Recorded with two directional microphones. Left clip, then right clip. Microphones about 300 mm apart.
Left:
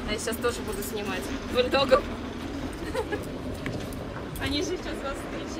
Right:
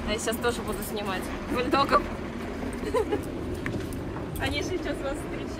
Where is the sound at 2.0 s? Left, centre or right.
Right.